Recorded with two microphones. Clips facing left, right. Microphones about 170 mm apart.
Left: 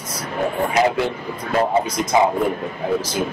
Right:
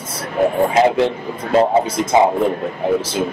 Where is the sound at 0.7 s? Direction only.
25° right (ahead or behind).